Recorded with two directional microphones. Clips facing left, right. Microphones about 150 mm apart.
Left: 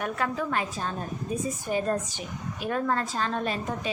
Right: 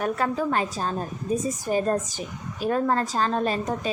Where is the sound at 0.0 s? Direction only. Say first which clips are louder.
Right 4 dB; 35° right (ahead or behind).